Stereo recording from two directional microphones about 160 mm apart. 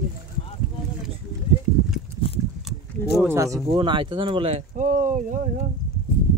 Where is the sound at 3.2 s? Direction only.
20° right (ahead or behind).